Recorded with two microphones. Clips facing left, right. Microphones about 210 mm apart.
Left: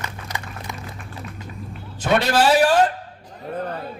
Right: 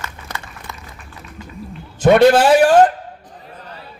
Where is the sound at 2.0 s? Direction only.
50° right (ahead or behind).